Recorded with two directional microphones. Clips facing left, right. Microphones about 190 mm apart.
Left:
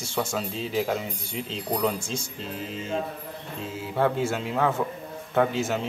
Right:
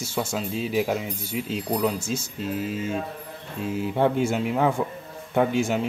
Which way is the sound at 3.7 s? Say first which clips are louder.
Right 3 dB; 20° right (ahead or behind).